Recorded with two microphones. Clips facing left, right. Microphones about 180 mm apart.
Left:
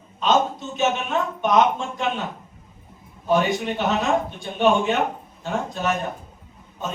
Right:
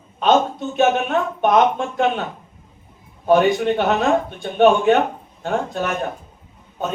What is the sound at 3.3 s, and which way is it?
Speech, 60° right (ahead or behind).